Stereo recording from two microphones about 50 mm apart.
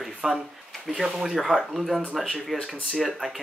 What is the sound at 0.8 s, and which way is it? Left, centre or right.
Speech, centre.